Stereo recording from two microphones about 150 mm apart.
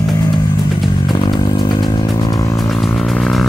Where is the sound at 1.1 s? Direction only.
30° left (ahead or behind).